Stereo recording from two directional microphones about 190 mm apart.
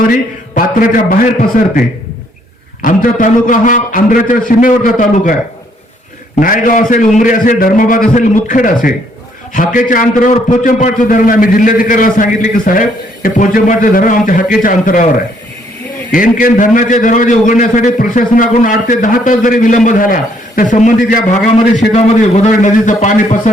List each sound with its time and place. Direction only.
0.5 s a man's voice: 45° left (ahead or behind)
2.8 s a man's voice: 45° left (ahead or behind)
6.4 s a man's voice: 45° left (ahead or behind)
16.1 s a man's voice: 45° left (ahead or behind)
22.4 s a man's voice: 40° left (ahead or behind)